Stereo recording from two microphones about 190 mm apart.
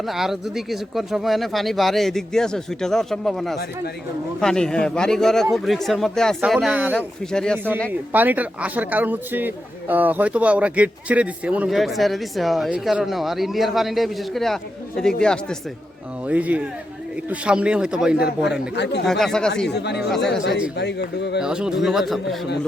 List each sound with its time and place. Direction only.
0.0 s a man's voice: centre (ahead or behind)
7.9 s a man's voice: 10° right (ahead or behind)
16.2 s a man's voice: 10° right (ahead or behind)
18.7 s speech: 65° left (ahead or behind)
19.0 s a man's voice: centre (ahead or behind)
19.7 s speech: 60° left (ahead or behind)
20.1 s a man's voice: centre (ahead or behind)
20.3 s speech: 65° left (ahead or behind)
21.4 s a man's voice: 5° right (ahead or behind)